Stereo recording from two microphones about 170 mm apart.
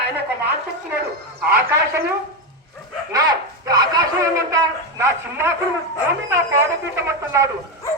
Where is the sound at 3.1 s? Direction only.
20° right (ahead or behind).